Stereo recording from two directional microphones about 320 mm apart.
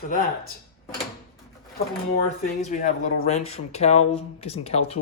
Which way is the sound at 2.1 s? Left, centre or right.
Left.